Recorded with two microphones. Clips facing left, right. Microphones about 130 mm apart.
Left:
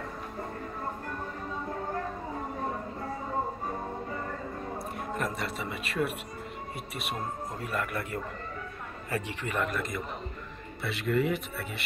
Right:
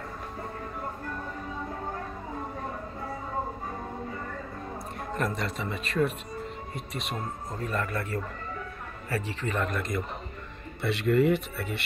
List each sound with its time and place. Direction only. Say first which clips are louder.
5.1 s a man's voice: right 3 dB; 5° left (ahead or behind)
9.8 s speech: right 2 dB; centre (ahead or behind)